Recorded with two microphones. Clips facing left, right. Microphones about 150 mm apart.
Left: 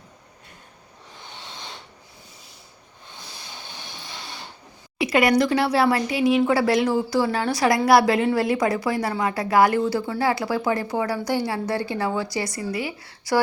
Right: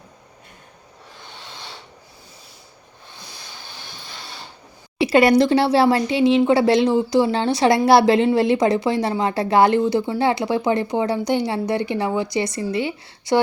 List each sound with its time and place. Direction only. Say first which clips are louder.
4.9 s a woman's voice: right 4 dB; 30° right (ahead or behind)